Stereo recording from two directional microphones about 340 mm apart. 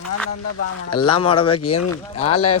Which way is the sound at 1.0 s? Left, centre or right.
Centre.